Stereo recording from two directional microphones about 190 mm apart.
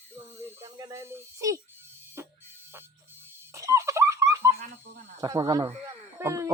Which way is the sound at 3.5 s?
15° right (ahead or behind).